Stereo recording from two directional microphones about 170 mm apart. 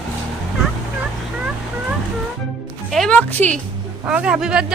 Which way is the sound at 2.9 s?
5° left (ahead or behind).